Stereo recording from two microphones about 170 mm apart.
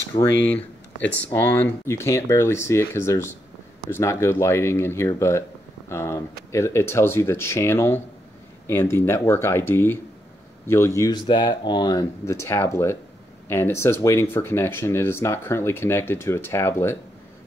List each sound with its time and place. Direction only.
0.2 s speech: 10° left (ahead or behind)